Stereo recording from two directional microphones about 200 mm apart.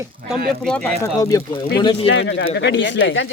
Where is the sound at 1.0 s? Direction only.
15° left (ahead or behind).